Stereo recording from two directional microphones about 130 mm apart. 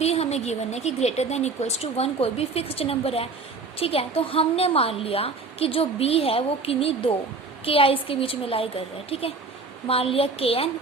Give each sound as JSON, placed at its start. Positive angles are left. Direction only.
{"t": 0.0, "sound": "a woman's voice", "side_deg": 55}